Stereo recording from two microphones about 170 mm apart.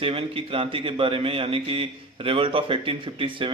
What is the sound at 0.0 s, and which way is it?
A man's voice, 30° right (ahead or behind).